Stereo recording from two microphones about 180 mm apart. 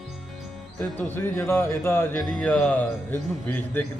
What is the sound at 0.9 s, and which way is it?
Speech, 10° left (ahead or behind).